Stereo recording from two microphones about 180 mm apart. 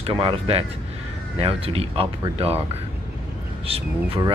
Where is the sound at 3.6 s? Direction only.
30° right (ahead or behind).